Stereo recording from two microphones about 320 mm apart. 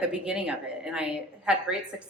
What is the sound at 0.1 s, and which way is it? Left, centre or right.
A woman's voice, centre.